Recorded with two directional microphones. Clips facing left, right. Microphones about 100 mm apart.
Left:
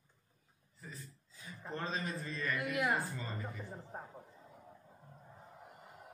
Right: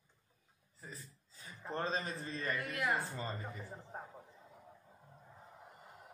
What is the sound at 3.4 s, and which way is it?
Speech, centre (ahead or behind).